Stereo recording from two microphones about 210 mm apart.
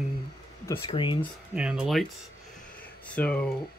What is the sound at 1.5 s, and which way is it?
Speech, 5° right (ahead or behind).